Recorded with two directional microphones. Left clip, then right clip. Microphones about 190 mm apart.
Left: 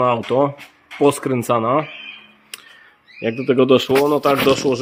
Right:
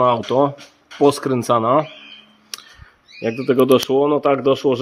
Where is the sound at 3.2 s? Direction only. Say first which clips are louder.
Even; 5° right (ahead or behind).